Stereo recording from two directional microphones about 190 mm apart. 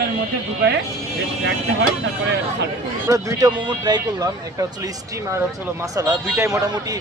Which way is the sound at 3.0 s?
15° right (ahead or behind).